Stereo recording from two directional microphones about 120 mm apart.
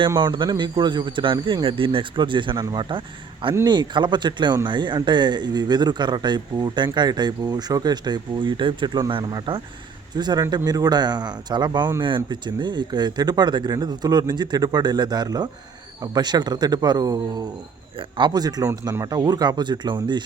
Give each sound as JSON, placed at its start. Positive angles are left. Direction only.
{"t": 0.2, "sound": "speech", "side_deg": -40}